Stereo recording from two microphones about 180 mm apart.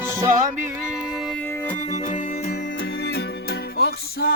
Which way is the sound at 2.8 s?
65° left (ahead or behind).